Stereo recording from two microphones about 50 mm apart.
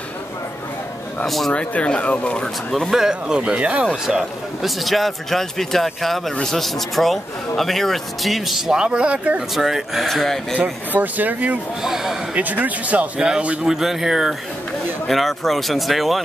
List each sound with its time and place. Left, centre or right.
1.2 s speech: centre
1.5 s speech: left
2.4 s speech: centre
2.9 s speech: centre
3.5 s a man's voice: right
3.8 s speech: centre
9.6 s speech: centre
10.0 s speech: centre
10.6 s speech: right
11.8 s speech: centre
12.4 s a man's voice: right
13.7 s speech: centre
15.0 s speech: centre